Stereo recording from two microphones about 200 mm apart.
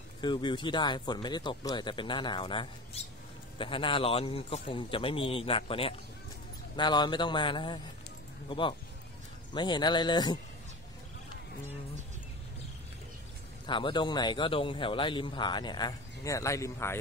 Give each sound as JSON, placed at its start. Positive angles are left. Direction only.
{"t": 0.2, "sound": "speech", "side_deg": 25}
{"t": 13.7, "sound": "speech", "side_deg": 25}